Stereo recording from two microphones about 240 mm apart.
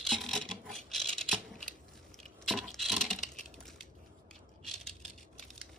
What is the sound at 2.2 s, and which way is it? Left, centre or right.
Keys jangling, centre.